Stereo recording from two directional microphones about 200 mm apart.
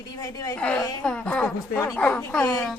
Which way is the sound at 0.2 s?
20° left (ahead or behind).